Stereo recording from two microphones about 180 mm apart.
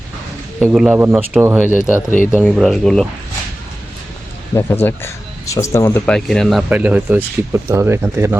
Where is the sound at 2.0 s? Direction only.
45° left (ahead or behind).